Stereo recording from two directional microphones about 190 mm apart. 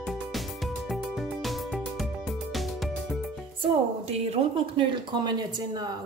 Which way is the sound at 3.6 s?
30° right (ahead or behind).